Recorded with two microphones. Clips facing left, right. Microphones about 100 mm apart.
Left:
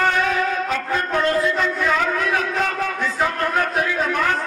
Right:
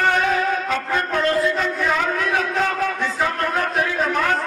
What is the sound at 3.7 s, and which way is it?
Speech, 40° right (ahead or behind).